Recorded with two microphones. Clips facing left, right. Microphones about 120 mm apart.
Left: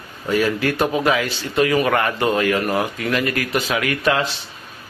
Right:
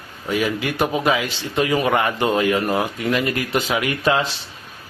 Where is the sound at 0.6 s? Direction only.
15° right (ahead or behind).